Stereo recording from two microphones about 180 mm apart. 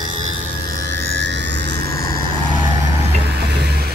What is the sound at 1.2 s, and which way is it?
Jet engine, 75° right (ahead or behind).